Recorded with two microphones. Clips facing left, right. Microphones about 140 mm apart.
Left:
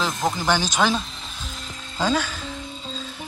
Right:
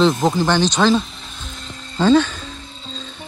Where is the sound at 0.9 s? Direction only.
Centre (ahead or behind).